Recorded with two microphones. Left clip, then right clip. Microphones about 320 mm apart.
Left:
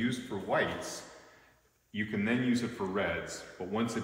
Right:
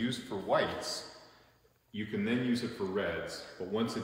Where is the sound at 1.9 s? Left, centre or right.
Centre.